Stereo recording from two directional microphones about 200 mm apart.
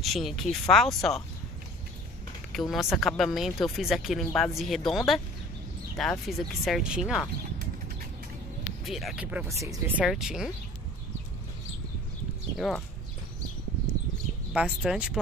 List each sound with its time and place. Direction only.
0.0 s speech: centre (ahead or behind)
2.5 s speech: centre (ahead or behind)
8.8 s speech: centre (ahead or behind)
10.0 s speech: 5° right (ahead or behind)
12.5 s speech: centre (ahead or behind)
14.5 s speech: 5° right (ahead or behind)